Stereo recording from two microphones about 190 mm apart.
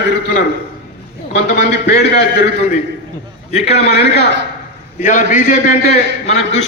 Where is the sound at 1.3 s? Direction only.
60° left (ahead or behind).